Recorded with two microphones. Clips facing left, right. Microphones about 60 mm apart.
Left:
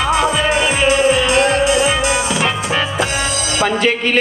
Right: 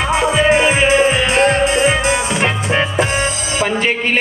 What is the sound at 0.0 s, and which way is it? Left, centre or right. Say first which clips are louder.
Music: right 1 dB; right.